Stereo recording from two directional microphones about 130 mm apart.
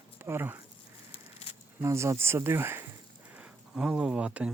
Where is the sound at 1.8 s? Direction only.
20° right (ahead or behind).